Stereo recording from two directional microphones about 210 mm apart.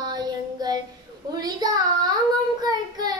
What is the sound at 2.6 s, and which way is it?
Child singing, 20° right (ahead or behind).